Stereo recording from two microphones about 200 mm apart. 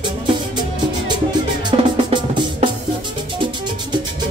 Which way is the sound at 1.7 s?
25° right (ahead or behind).